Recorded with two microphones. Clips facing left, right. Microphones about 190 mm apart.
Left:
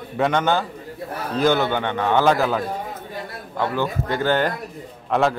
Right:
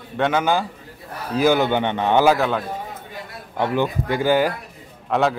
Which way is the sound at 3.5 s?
15° right (ahead or behind).